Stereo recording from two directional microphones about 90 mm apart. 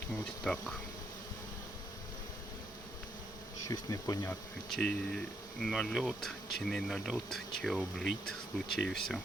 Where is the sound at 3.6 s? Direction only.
40° left (ahead or behind).